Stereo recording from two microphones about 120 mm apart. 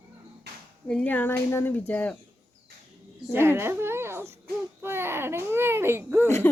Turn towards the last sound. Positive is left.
turn(degrees=20)  # may be behind; listen again after turning